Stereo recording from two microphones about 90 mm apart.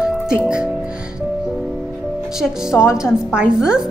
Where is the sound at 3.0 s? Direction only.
10° right (ahead or behind).